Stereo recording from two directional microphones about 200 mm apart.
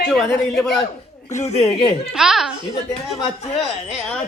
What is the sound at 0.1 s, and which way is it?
Speech, centre (ahead or behind).